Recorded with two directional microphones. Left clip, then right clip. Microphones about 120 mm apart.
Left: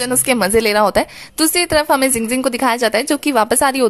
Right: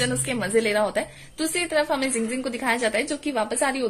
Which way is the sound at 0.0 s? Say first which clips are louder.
Left 9 dB; 60° left (ahead or behind).